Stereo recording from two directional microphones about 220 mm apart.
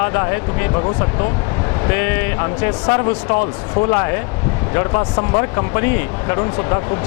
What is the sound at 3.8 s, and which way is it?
Speech, 20° left (ahead or behind).